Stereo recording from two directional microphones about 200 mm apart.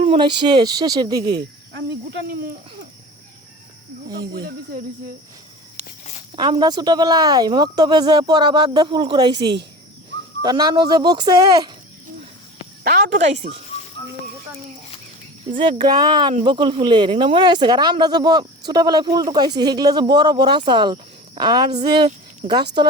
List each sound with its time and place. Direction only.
0.0 s speech: 25° right (ahead or behind)
4.1 s speech: 50° right (ahead or behind)
6.3 s speech: 25° right (ahead or behind)
12.8 s a woman's voice: 50° right (ahead or behind)
15.5 s speech: 25° right (ahead or behind)
22.4 s speech: 40° right (ahead or behind)